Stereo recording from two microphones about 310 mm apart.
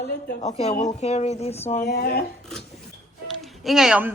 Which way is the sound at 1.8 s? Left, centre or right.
Left.